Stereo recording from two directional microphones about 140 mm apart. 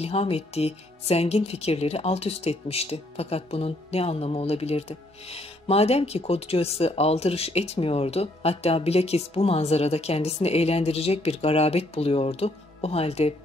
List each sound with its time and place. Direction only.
0.0 s speech: 45° left (ahead or behind)